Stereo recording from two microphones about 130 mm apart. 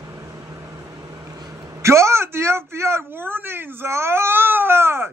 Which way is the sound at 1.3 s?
20° right (ahead or behind).